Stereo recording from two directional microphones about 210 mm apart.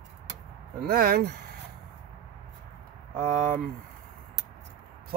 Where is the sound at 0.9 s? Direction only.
45° right (ahead or behind).